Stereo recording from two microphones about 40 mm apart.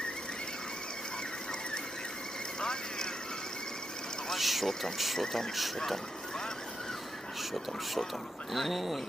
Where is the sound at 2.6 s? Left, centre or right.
Centre.